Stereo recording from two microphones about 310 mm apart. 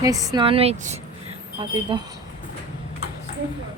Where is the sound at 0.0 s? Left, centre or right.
Centre.